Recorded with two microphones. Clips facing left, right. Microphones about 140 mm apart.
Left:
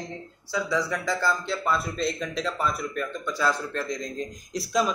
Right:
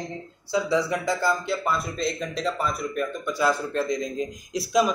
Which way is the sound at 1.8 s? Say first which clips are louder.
Even; centre (ahead or behind).